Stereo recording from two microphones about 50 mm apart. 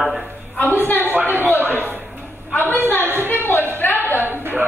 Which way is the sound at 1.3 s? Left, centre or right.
Right.